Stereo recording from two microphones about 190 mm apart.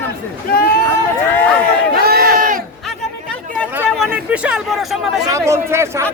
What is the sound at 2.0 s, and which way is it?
Crowd, 50° right (ahead or behind).